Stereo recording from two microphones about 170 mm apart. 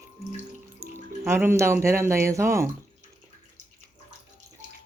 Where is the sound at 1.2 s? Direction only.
15° right (ahead or behind).